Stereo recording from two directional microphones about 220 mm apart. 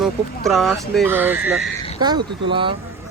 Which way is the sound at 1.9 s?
20° right (ahead or behind).